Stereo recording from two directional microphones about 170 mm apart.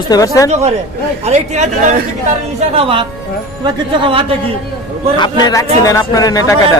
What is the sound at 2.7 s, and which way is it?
Speech, 35° right (ahead or behind).